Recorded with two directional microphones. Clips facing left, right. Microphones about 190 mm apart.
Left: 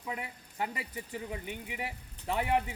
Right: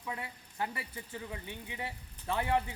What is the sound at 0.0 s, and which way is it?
Speech, 20° left (ahead or behind).